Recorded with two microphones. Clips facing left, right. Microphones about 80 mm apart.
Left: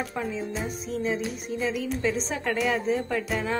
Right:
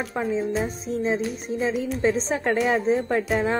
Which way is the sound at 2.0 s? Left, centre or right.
Right.